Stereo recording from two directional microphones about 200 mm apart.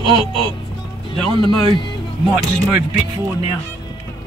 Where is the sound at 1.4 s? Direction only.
25° left (ahead or behind).